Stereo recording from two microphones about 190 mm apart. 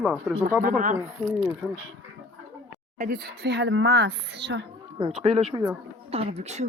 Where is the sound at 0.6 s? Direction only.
45° right (ahead or behind).